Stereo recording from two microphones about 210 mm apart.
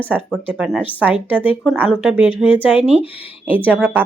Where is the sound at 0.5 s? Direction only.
Centre (ahead or behind).